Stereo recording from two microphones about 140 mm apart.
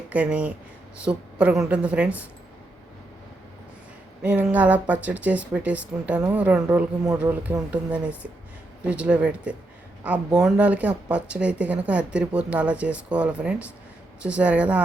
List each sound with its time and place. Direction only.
0.1 s speech: 10° right (ahead or behind)
4.2 s speech: 10° right (ahead or behind)